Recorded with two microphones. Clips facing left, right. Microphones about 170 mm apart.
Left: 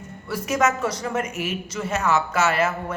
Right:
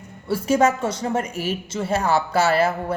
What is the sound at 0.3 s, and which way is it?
A man's voice, 30° right (ahead or behind).